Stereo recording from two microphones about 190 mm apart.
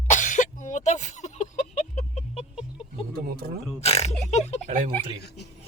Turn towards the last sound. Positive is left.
turn(degrees=60)  # may be behind; listen again after turning